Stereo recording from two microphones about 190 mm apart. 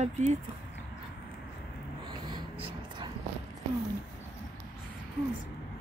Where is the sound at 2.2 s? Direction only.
25° right (ahead or behind).